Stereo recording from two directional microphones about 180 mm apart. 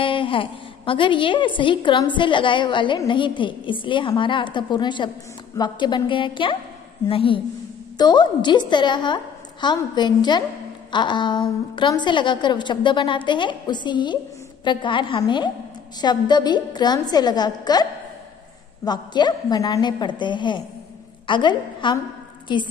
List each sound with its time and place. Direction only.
0.0 s a woman's voice: 30° left (ahead or behind)
18.9 s a woman's voice: 25° left (ahead or behind)